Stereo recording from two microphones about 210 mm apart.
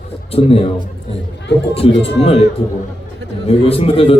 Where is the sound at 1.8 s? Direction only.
25° left (ahead or behind).